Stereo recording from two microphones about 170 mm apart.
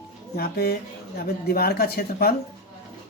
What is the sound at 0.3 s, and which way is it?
Speech, 65° left (ahead or behind).